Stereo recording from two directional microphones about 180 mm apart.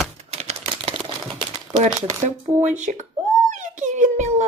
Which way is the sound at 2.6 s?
45° right (ahead or behind).